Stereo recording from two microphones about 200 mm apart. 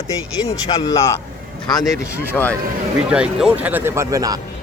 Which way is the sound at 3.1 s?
5° right (ahead or behind).